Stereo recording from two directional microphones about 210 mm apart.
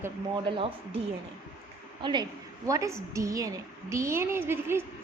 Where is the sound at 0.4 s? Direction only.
25° right (ahead or behind).